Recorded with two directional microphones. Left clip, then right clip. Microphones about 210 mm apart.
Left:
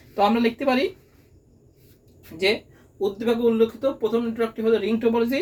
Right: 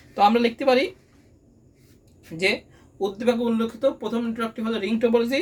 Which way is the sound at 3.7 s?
35° right (ahead or behind).